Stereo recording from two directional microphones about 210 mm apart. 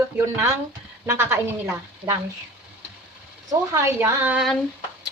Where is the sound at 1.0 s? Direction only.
10° right (ahead or behind).